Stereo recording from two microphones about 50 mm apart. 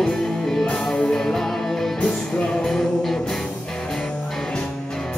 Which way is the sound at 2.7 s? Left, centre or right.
Centre.